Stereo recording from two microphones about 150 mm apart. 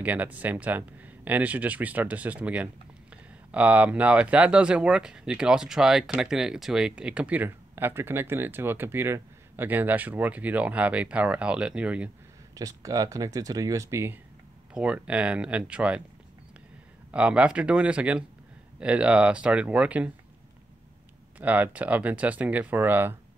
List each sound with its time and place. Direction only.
0.0 s speech: 10° right (ahead or behind)
12.5 s speech: 25° right (ahead or behind); by 16.0 s 10° right (ahead or behind)
17.1 s speech: 10° right (ahead or behind)
21.4 s speech: 10° right (ahead or behind)